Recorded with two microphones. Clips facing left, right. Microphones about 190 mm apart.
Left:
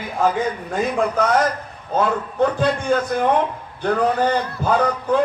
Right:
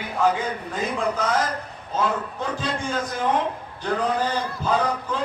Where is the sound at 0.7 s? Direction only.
55° left (ahead or behind).